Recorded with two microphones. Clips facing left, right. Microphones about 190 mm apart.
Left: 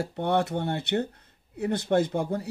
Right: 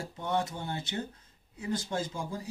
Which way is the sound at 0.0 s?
65° left (ahead or behind).